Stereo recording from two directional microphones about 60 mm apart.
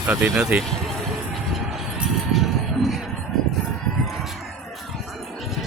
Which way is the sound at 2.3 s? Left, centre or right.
Centre.